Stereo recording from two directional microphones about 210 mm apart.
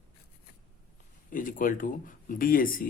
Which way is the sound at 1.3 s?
40° left (ahead or behind).